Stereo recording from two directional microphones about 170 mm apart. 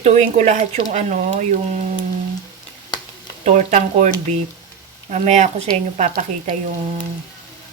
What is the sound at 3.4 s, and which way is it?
Speech, 45° right (ahead or behind).